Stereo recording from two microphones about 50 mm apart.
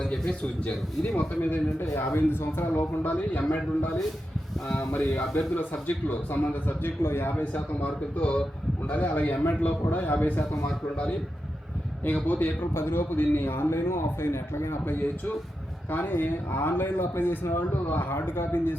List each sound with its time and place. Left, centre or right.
0.0 s a sound: centre
0.6 s a man's voice: left
1.8 s a man's voice: left
2.7 s a man's voice: left
4.9 s a man's voice: left
7.0 s a man's voice: left
7.5 s a man's voice: left
12.0 s a man's voice: left
12.7 s a man's voice: left